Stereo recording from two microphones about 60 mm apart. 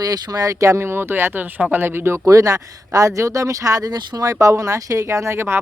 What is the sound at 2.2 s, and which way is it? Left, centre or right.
Speech, right.